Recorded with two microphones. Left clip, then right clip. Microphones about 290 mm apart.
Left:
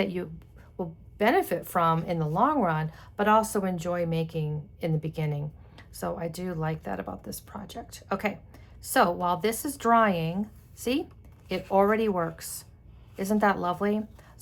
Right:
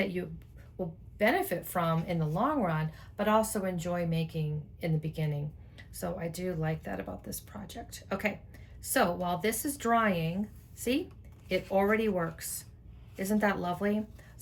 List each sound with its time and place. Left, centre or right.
0.0 s speech: centre